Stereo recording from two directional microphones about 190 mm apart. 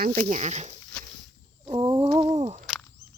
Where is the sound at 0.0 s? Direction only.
45° right (ahead or behind).